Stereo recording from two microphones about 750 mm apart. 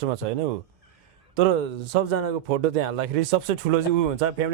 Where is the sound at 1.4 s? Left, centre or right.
Right.